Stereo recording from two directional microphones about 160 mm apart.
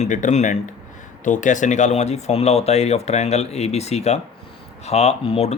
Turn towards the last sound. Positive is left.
turn(degrees=40)  # may be behind; listen again after turning